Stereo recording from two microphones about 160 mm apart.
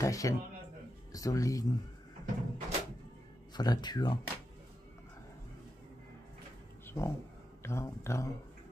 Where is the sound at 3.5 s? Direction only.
25° left (ahead or behind).